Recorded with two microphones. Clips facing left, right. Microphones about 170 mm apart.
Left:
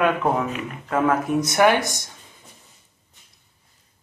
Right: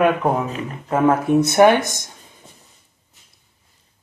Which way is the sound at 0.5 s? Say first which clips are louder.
Right 2 dB; 30° right (ahead or behind).